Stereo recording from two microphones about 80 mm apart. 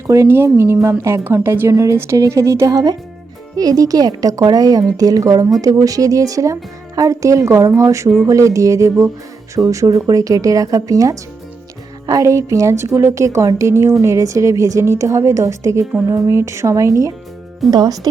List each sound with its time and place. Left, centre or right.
0.1 s speech: right
17.7 s speech: right